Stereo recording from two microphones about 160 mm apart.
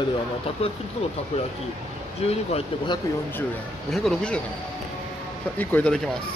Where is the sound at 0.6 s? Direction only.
40° left (ahead or behind).